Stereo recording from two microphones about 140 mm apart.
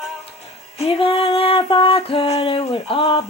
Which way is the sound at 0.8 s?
40° left (ahead or behind).